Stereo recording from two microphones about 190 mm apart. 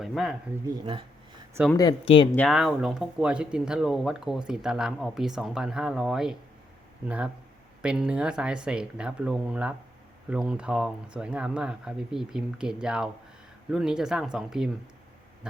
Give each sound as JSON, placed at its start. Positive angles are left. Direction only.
{"t": 0.0, "sound": "speech", "side_deg": 0}
{"t": 1.7, "sound": "speech", "side_deg": 20}
{"t": 2.3, "sound": "speech", "side_deg": 5}
{"t": 7.8, "sound": "speech", "side_deg": -5}